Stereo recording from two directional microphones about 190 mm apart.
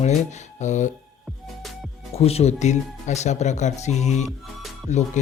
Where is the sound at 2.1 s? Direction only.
30° left (ahead or behind).